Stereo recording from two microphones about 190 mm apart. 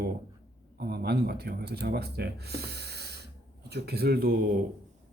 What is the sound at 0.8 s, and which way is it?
Speech, 60° right (ahead or behind).